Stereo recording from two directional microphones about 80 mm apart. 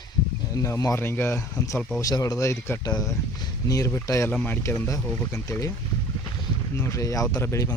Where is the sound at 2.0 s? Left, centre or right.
Left.